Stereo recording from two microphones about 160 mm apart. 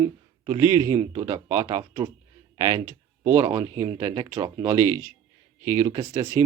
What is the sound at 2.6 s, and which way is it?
Speech, 20° right (ahead or behind).